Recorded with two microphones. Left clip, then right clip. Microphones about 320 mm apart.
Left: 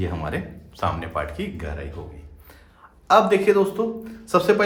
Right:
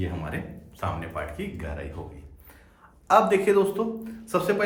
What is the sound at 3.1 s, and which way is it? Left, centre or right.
A man's voice, centre.